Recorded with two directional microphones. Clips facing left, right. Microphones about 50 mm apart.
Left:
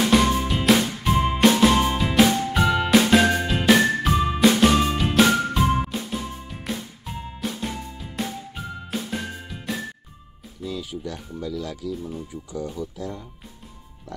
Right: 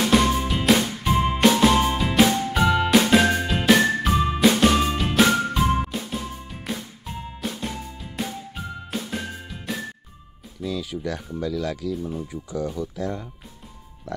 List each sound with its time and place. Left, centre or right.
0.4 s music: centre
10.6 s music: right
11.4 s speech: right
12.9 s speech: right